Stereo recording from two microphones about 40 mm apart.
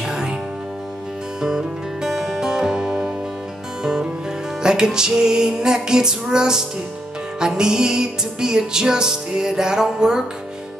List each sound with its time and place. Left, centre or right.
0.0 s music: centre
1.4 s music: centre